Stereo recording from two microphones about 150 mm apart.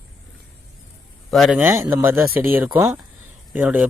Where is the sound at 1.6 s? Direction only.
15° right (ahead or behind).